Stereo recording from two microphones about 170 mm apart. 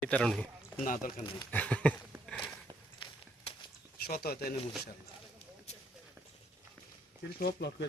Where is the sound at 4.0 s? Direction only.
65° left (ahead or behind).